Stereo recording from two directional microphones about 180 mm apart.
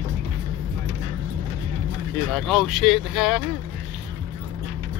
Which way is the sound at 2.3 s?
Centre (ahead or behind).